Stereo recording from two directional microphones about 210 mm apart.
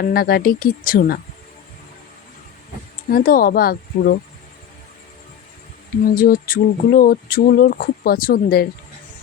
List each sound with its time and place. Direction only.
0.0 s speech: 45° left (ahead or behind)
3.1 s speech: 45° left (ahead or behind)
6.1 s speech: 45° left (ahead or behind)